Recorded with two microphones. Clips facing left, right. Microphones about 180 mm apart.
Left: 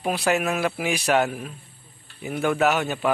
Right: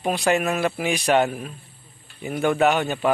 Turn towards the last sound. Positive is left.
turn(degrees=5)  # may be behind; listen again after turning